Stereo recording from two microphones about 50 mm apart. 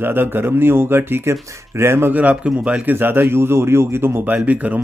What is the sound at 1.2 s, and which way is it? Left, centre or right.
Speech, right.